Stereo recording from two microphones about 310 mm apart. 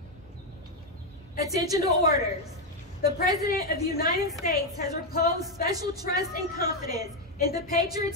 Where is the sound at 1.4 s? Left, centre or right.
Centre.